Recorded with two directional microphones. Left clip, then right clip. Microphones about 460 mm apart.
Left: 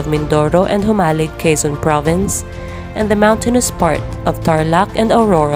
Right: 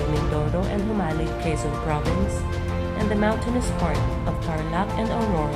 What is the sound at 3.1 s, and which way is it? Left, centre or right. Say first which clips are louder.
Speech: left 13 dB; centre.